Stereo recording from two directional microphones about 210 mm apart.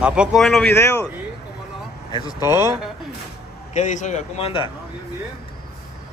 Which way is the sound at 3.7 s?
35° left (ahead or behind).